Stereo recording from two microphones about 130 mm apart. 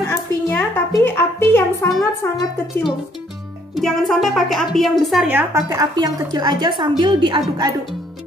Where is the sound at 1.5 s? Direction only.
20° left (ahead or behind).